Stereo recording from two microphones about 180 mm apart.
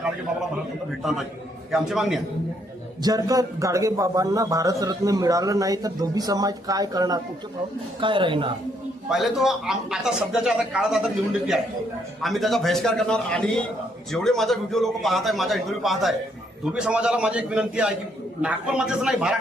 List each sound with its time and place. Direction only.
0.9 s a man's voice: centre (ahead or behind)
3.0 s a man's voice: 20° right (ahead or behind)
9.0 s a man's voice: centre (ahead or behind)